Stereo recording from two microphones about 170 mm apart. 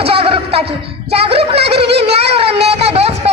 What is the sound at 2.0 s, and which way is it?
Music, 35° right (ahead or behind).